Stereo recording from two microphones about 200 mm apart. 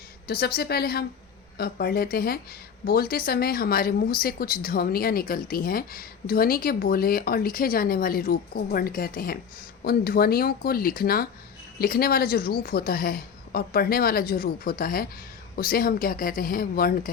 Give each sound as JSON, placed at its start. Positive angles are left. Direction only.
{"t": 0.3, "sound": "speech", "side_deg": 50}